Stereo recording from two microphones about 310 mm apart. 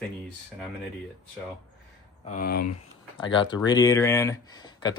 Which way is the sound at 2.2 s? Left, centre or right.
Left.